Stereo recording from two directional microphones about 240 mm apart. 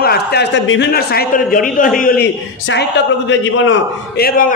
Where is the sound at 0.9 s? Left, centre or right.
Left.